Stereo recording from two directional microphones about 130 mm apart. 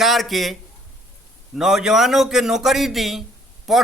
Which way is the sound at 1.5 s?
5° right (ahead or behind).